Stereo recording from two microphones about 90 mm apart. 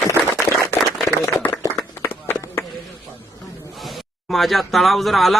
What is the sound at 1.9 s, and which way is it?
Run, 25° left (ahead or behind).